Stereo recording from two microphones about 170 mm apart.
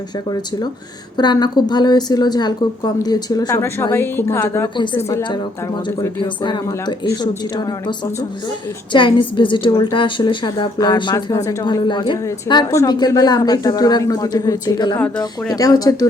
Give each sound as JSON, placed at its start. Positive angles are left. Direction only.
{"t": 1.1, "sound": "a woman's voice", "side_deg": 25}
{"t": 14.9, "sound": "speech", "side_deg": 10}
{"t": 15.2, "sound": "a woman's voice", "side_deg": 20}